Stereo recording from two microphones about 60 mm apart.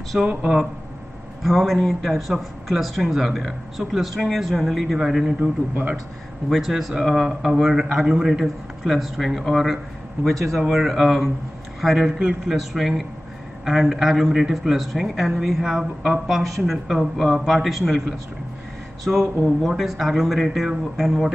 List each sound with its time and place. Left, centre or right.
0.3 s speech: centre
5.4 s speech: right
6.5 s speech: centre
8.8 s speech: centre